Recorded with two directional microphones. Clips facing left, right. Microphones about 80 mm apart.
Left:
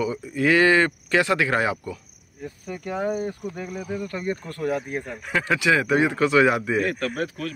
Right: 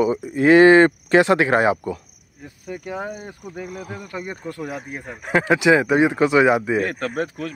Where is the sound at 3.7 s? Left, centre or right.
Right.